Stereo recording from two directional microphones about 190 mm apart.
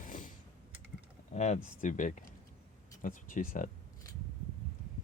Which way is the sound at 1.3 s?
35° left (ahead or behind).